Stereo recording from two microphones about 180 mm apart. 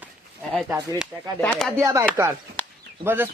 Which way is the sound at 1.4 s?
5° left (ahead or behind).